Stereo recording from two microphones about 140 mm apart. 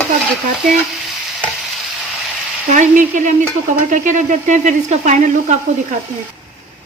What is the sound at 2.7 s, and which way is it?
Speech, 60° right (ahead or behind).